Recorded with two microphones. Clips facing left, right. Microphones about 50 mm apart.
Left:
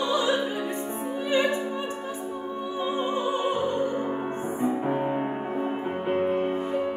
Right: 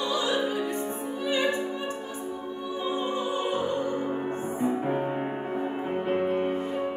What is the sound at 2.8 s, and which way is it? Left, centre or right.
Music, left.